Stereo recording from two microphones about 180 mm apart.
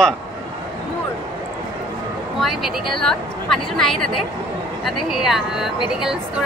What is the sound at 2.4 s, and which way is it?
A woman's voice, centre (ahead or behind).